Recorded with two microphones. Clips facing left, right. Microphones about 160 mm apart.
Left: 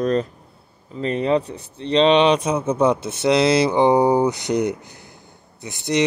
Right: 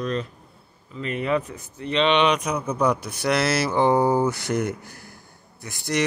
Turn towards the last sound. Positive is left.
turn(degrees=20)  # may be behind; listen again after turning